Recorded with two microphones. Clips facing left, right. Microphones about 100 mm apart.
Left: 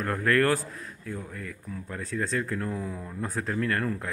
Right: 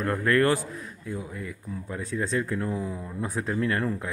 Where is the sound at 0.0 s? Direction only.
Centre (ahead or behind).